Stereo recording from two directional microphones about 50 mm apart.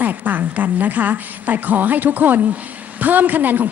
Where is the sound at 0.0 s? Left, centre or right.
Right.